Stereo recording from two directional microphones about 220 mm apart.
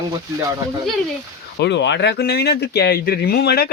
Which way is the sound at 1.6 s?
55° left (ahead or behind).